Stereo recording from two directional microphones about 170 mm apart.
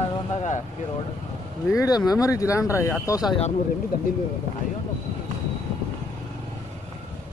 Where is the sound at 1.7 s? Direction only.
20° left (ahead or behind).